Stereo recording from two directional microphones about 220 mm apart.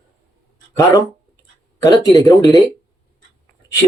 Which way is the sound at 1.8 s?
15° left (ahead or behind).